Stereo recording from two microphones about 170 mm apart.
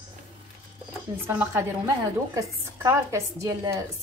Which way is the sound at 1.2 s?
15° right (ahead or behind).